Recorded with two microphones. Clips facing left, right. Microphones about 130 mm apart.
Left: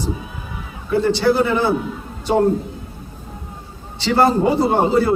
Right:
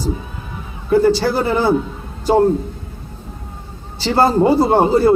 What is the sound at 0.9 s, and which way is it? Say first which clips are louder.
Speech: right 2 dB; 40° right (ahead or behind).